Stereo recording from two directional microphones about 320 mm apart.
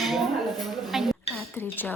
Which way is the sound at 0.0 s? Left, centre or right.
Centre.